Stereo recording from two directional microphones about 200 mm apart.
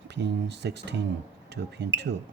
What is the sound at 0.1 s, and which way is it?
Speech, 60° right (ahead or behind).